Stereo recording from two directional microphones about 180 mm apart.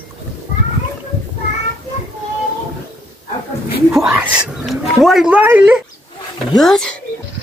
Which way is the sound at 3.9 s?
5° right (ahead or behind).